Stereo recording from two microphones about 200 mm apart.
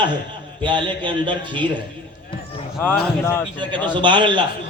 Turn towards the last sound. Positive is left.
turn(degrees=-25)  # may be behind; listen again after turning